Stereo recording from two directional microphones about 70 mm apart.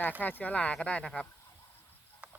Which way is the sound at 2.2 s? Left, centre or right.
Centre.